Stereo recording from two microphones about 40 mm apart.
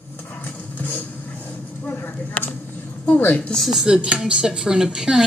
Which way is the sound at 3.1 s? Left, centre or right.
Left.